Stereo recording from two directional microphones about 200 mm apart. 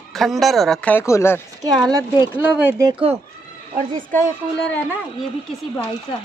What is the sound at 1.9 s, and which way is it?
Speech, 15° right (ahead or behind).